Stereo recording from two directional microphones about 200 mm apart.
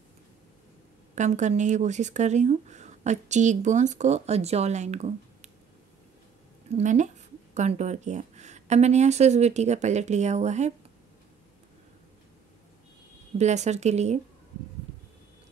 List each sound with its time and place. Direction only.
1.1 s speech: 35° right (ahead or behind)
6.7 s speech: 35° right (ahead or behind)
13.4 s speech: 35° right (ahead or behind)